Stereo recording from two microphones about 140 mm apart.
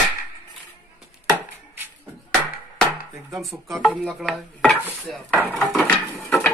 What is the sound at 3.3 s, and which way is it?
Speech, centre (ahead or behind).